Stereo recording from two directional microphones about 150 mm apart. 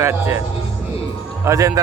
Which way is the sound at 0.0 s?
15° right (ahead or behind).